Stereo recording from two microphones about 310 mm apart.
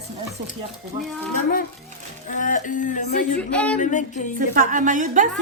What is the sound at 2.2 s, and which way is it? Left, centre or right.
Speech, left.